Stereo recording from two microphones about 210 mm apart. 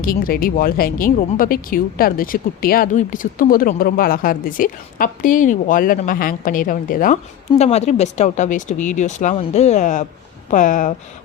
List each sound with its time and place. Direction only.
0.0 s speech: 45° left (ahead or behind)